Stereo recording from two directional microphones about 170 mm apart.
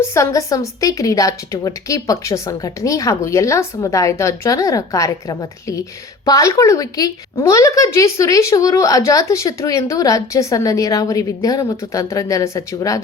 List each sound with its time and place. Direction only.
0.1 s a woman's voice: 20° left (ahead or behind)